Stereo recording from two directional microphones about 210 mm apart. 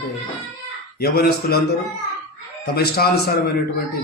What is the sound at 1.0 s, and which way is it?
Speech, 45° left (ahead or behind).